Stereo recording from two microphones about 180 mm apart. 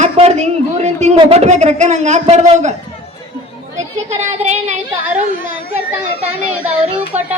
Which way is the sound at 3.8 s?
40° right (ahead or behind).